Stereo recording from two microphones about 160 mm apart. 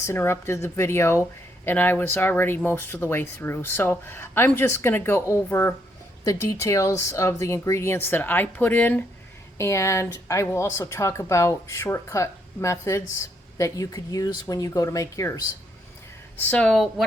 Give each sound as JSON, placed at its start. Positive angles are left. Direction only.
{"t": 0.0, "sound": "speech", "side_deg": 15}
{"t": 16.4, "sound": "a woman's voice", "side_deg": 5}